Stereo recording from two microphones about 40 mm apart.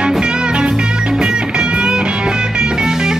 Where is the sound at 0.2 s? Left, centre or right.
Right.